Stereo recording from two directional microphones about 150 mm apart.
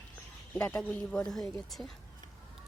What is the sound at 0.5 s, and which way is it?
Speech, 5° left (ahead or behind).